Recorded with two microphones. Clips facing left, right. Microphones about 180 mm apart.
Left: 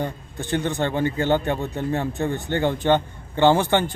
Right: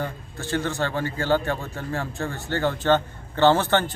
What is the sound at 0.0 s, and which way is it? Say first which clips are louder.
A man's voice: left 2 dB; 15° left (ahead or behind).